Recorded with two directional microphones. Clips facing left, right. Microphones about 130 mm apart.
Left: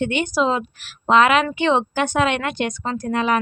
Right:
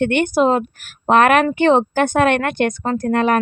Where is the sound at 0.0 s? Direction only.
60° right (ahead or behind).